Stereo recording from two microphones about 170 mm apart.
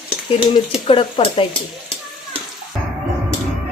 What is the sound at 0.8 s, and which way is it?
Speech, 30° left (ahead or behind).